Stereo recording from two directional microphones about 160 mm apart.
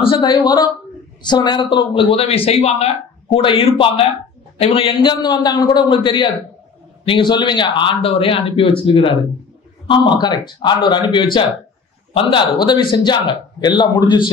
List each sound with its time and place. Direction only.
0.0 s a man's voice: 30° left (ahead or behind)